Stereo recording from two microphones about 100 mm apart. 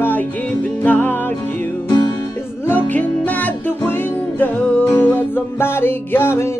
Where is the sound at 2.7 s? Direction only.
15° left (ahead or behind).